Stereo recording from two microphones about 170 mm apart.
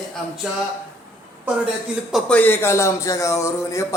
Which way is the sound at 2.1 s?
10° left (ahead or behind).